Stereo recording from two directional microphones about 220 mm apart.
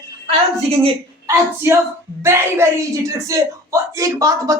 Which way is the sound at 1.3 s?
10° right (ahead or behind).